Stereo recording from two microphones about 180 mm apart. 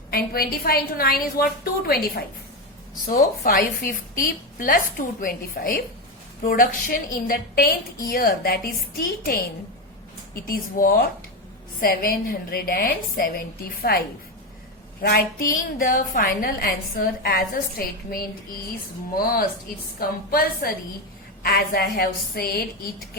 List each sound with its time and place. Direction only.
0.1 s a woman's voice: 55° left (ahead or behind)
10.4 s a woman's voice: 55° left (ahead or behind)